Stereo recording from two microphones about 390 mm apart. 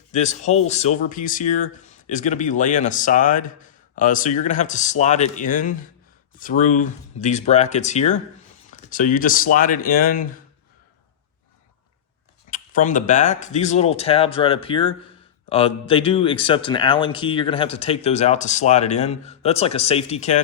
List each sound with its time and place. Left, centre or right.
0.1 s speech: centre
12.5 s speech: left